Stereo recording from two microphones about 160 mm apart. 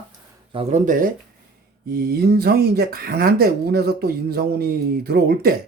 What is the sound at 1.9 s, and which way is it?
Speech, 70° right (ahead or behind).